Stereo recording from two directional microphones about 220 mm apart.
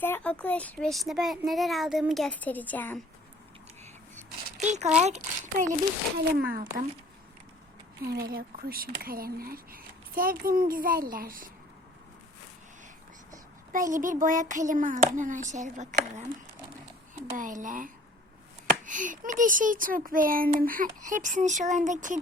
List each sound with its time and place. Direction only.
0.0 s a child's voice: 10° left (ahead or behind)
4.6 s a child's voice: 30° right (ahead or behind)
6.1 s speech: 45° right (ahead or behind)
8.0 s speech: 45° right (ahead or behind)
13.9 s speech: 35° right (ahead or behind)
17.3 s speech: 35° right (ahead or behind)